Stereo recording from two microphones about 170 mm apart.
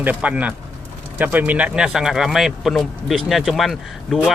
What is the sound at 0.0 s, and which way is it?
Speech, 10° right (ahead or behind).